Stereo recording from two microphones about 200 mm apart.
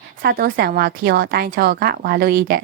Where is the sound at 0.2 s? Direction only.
50° right (ahead or behind).